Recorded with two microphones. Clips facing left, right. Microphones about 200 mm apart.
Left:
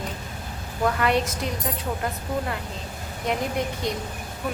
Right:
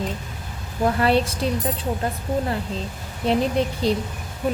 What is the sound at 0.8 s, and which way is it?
Speech, 30° right (ahead or behind).